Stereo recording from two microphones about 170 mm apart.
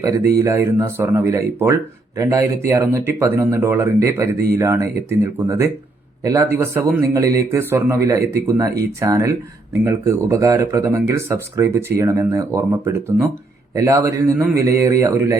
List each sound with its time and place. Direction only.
0.3 s speech: 15° right (ahead or behind)